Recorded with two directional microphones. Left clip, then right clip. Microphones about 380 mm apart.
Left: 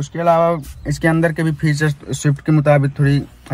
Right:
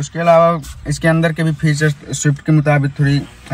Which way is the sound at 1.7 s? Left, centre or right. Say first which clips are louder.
Right 2 dB; left.